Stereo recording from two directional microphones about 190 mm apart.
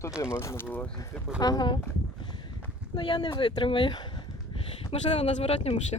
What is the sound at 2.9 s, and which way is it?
Speech, 25° left (ahead or behind).